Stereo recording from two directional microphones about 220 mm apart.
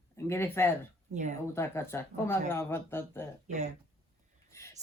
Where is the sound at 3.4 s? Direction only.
30° right (ahead or behind).